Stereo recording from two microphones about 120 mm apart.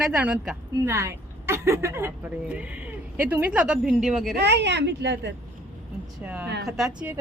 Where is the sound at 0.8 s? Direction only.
25° right (ahead or behind); by 4.3 s 5° right (ahead or behind).